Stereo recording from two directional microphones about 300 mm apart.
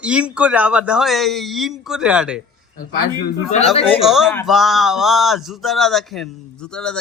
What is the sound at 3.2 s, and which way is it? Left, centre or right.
Speech, left.